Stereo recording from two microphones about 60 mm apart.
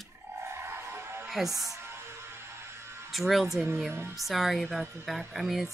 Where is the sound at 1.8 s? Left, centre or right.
Right.